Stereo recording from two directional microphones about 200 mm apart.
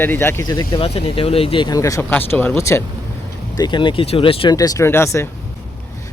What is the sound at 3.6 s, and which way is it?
Speech, 25° left (ahead or behind).